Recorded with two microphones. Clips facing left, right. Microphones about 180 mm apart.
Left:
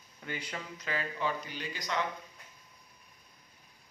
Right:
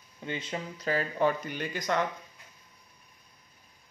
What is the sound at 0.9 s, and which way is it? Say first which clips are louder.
Speech: right 7 dB; 45° right (ahead or behind).